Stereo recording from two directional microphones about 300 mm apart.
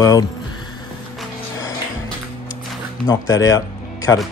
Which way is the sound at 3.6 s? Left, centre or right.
Centre.